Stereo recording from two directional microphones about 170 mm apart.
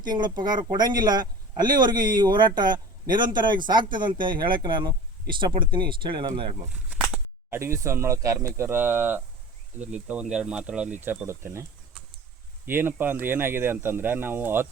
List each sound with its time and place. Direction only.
0.0 s speech: 25° right (ahead or behind)
6.9 s speech: 10° right (ahead or behind)
12.6 s speech: 10° right (ahead or behind)